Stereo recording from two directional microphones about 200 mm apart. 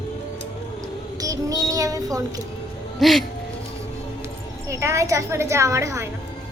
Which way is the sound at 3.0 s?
Centre (ahead or behind).